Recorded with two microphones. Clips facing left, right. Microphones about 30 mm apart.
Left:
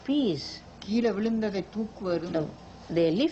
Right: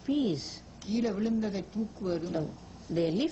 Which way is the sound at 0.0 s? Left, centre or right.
Left.